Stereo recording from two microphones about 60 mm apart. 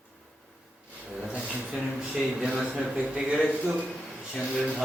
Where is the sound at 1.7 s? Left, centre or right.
Centre.